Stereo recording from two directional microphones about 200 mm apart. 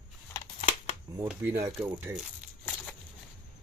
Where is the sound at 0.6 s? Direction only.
35° left (ahead or behind).